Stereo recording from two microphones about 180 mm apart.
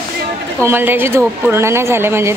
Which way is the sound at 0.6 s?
10° right (ahead or behind).